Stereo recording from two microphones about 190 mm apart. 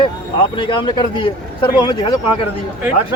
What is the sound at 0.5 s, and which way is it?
A man's voice, 25° left (ahead or behind).